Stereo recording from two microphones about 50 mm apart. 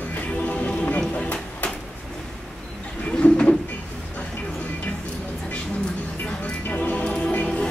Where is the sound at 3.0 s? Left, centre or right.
Left.